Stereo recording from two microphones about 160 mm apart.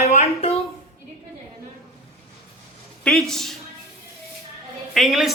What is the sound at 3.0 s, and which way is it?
Speech, centre (ahead or behind).